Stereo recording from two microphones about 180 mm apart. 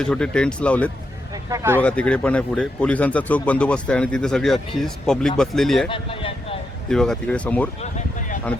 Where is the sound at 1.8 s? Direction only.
5° left (ahead or behind).